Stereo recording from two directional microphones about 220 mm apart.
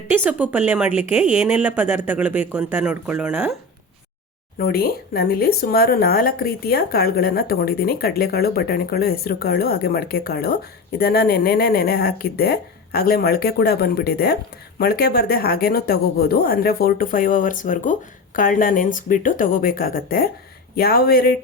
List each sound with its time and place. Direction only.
0.1 s a woman's voice: 5° right (ahead or behind)
4.5 s speech: 45° left (ahead or behind)